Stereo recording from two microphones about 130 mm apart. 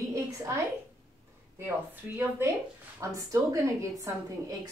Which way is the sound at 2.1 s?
20° right (ahead or behind).